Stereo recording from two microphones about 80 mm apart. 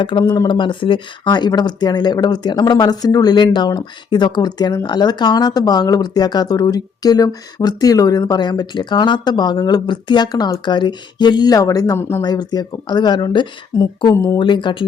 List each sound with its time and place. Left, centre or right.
0.0 s speech: left
3.3 s speech: left
11.5 s speech: left
11.9 s speech: left
12.2 s speech: left
13.7 s speech: left
14.3 s speech: left